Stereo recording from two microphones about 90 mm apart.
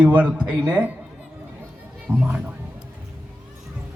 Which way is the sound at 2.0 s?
15° right (ahead or behind).